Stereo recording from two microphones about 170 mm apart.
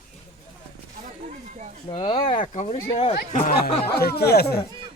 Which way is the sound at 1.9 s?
35° left (ahead or behind).